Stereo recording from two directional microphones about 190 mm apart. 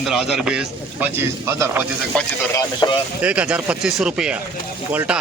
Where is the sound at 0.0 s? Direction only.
Centre (ahead or behind).